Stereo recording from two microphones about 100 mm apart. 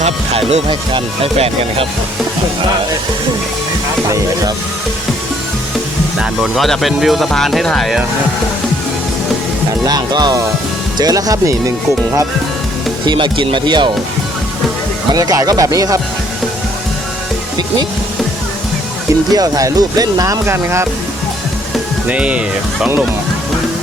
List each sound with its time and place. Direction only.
0.3 s speech: 65° right (ahead or behind)
6.1 s speech: centre (ahead or behind)
9.8 s speech: 45° right (ahead or behind)
13.1 s speech: 50° right (ahead or behind)
15.1 s speech: 35° right (ahead or behind)
19.3 s speech: 40° right (ahead or behind)
22.1 s speech: 10° right (ahead or behind)